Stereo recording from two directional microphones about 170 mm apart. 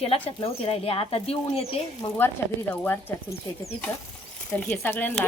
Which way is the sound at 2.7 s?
10° left (ahead or behind).